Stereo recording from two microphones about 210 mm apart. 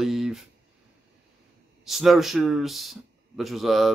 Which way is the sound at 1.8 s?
Centre (ahead or behind).